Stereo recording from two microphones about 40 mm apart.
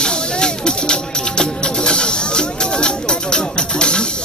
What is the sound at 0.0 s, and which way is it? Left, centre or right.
Music, left.